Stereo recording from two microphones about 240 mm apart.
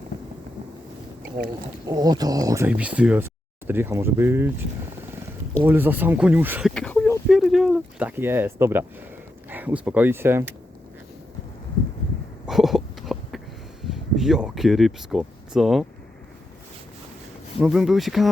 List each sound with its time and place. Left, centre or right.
1.9 s speech: centre
5.6 s speech: centre
12.5 s a sound: centre
13.8 s speech: centre
17.6 s speech: centre